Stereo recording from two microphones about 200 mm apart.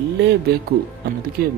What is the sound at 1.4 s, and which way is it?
Speech, 50° right (ahead or behind).